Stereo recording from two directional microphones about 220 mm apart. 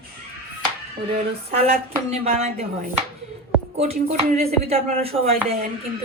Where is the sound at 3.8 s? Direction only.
30° right (ahead or behind).